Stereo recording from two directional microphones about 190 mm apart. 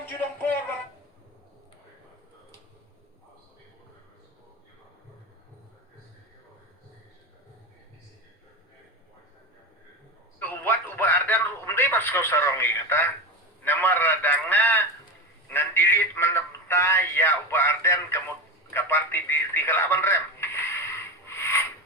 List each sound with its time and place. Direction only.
0.0 s music: 10° left (ahead or behind)
10.4 s a sound: 10° left (ahead or behind)
18.7 s telephone: 15° left (ahead or behind)